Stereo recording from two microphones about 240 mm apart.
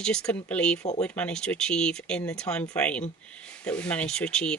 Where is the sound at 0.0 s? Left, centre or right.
Centre.